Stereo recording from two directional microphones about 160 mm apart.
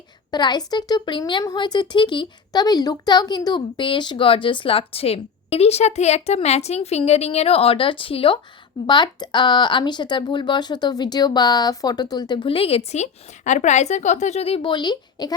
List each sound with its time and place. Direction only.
0.3 s a woman's voice: 25° left (ahead or behind)